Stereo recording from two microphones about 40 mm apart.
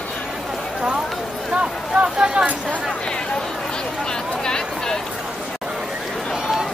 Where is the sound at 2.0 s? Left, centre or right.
Right.